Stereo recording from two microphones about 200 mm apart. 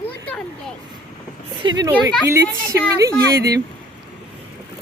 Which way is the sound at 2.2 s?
15° right (ahead or behind).